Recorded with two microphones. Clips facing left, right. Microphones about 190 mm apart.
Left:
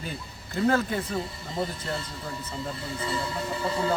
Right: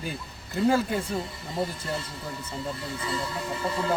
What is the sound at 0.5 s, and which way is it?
Speech, 10° right (ahead or behind).